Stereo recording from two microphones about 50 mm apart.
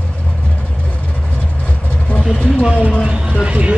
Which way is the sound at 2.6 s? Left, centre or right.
Right.